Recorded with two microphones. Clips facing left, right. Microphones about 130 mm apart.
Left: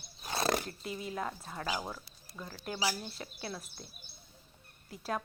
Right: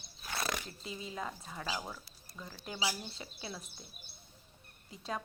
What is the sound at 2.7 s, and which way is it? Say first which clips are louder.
Speech: left 2 dB; 25° right (ahead or behind).